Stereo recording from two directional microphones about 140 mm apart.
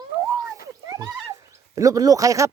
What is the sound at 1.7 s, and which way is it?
Speech, 25° right (ahead or behind).